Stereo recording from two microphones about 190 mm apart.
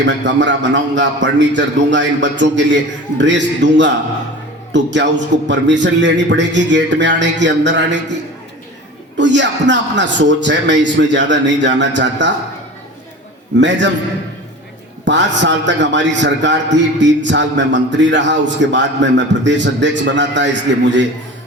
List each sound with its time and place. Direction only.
0.0 s a man's voice: 70° right (ahead or behind)
9.1 s a man's voice: 70° right (ahead or behind)
13.6 s a man's voice: 70° right (ahead or behind)
15.0 s a man's voice: 70° right (ahead or behind)